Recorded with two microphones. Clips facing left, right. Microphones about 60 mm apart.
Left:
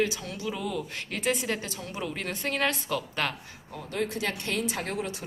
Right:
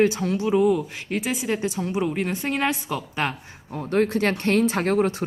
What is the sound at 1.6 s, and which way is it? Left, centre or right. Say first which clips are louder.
A woman's voice: right 10 dB; centre.